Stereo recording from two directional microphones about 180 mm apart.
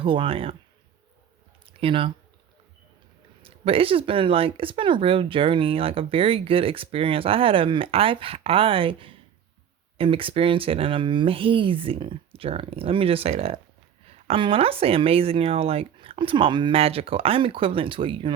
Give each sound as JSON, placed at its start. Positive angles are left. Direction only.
{"t": 0.0, "sound": "speech", "side_deg": -30}
{"t": 1.6, "sound": "a sound", "side_deg": -30}
{"t": 3.4, "sound": "speech", "side_deg": -30}